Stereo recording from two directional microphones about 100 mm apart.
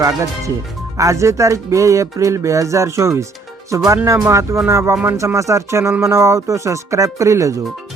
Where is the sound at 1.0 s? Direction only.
30° right (ahead or behind).